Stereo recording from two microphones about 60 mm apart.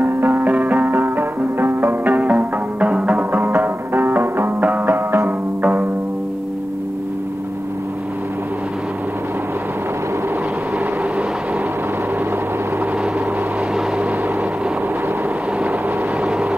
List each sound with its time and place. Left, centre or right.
0.0 s music: right
0.5 s music: right
0.9 s music: right
2.3 s music: centre
3.2 s music: right
4.9 s music: right
16.2 s vehicle: centre